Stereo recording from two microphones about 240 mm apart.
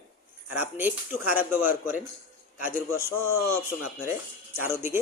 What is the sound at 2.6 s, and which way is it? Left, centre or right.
Speech, left.